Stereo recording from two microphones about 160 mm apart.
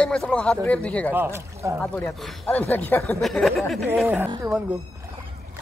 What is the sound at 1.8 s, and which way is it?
Speech, centre (ahead or behind).